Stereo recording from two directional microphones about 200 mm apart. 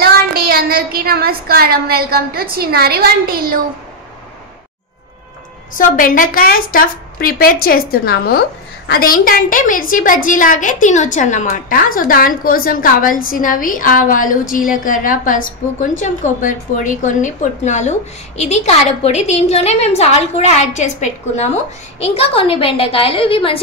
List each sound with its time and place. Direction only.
0.0 s child singing: 50° right (ahead or behind)
5.8 s a woman's voice: 45° left (ahead or behind); by 23.6 s 25° left (ahead or behind)